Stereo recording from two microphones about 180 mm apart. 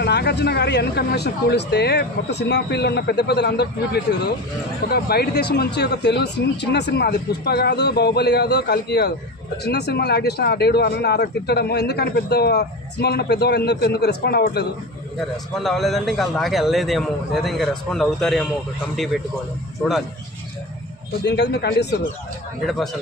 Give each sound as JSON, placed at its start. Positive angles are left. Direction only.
{"t": 0.0, "sound": "speech", "side_deg": 65}
{"t": 15.5, "sound": "a man's voice", "side_deg": 0}
{"t": 21.2, "sound": "speech", "side_deg": 70}